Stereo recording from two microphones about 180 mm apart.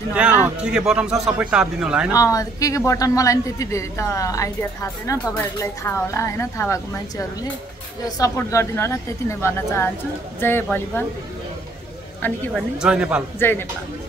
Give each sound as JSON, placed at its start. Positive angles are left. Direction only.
{"t": 0.1, "sound": "a man's voice", "side_deg": -5}
{"t": 2.1, "sound": "speech", "side_deg": 20}
{"t": 12.2, "sound": "a man's voice", "side_deg": 0}
{"t": 13.4, "sound": "speech", "side_deg": 10}